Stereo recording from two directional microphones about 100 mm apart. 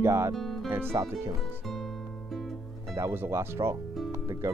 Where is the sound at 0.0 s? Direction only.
30° right (ahead or behind).